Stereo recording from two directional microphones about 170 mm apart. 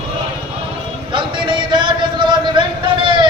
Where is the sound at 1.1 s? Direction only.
30° right (ahead or behind).